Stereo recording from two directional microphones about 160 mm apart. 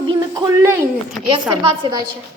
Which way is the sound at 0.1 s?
25° right (ahead or behind).